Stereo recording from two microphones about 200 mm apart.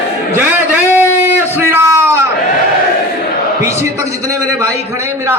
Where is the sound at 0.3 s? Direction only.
10° right (ahead or behind).